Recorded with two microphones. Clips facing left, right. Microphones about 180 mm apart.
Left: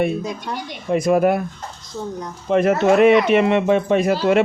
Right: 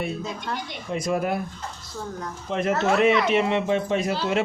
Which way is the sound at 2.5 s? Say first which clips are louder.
Left 8 dB; 60° left (ahead or behind).